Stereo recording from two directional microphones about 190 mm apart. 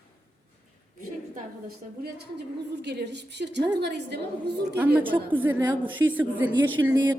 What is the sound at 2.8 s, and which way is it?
A woman's voice, 65° right (ahead or behind).